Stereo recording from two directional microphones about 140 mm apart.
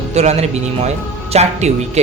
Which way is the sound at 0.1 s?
50° right (ahead or behind).